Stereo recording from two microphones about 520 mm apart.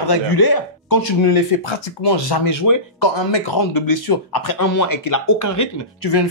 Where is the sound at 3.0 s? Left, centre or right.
Left.